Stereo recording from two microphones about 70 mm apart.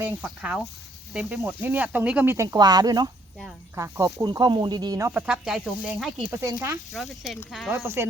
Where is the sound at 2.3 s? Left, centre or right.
Right.